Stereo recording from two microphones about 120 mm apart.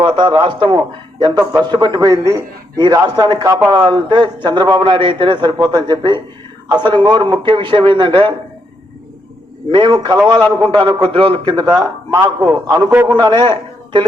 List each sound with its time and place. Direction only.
0.0 s a man's voice: 40° right (ahead or behind)
2.0 s a man's voice: 25° right (ahead or behind); by 8.3 s 45° right (ahead or behind)
9.7 s a man's voice: 40° right (ahead or behind)
11.6 s a man's voice: 25° right (ahead or behind)
13.1 s speech: 40° right (ahead or behind)